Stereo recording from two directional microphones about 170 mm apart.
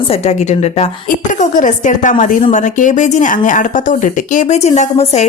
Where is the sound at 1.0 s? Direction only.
50° left (ahead or behind).